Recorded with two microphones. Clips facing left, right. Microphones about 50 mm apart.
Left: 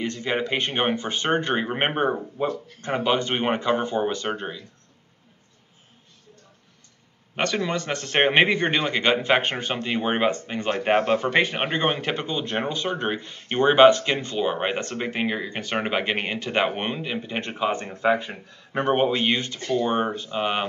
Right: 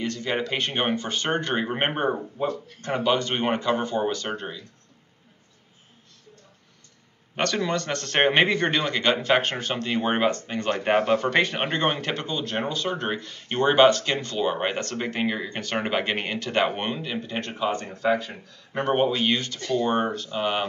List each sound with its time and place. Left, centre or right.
0.0 s speech: centre
7.3 s speech: centre